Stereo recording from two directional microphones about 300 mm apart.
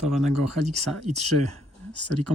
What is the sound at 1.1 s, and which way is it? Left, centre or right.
Speech, right.